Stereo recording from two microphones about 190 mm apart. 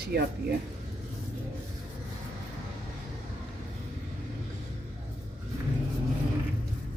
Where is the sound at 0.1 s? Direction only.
60° right (ahead or behind).